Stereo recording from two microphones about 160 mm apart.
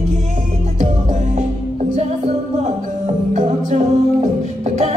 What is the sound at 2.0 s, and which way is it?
Music, 45° right (ahead or behind).